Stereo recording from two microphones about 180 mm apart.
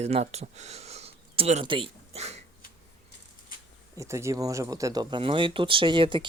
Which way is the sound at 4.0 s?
15° right (ahead or behind).